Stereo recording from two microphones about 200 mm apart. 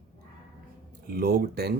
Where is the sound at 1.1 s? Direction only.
50° right (ahead or behind).